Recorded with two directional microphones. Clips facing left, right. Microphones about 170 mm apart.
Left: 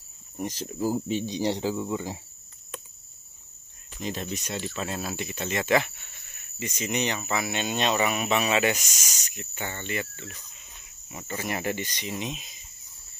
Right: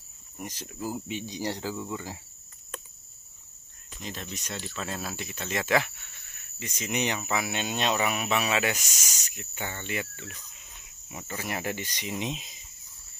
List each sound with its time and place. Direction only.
0.4 s speech: 30° left (ahead or behind)
4.0 s speech: 20° left (ahead or behind); by 7.0 s centre (ahead or behind)
7.0 s speech: 10° right (ahead or behind)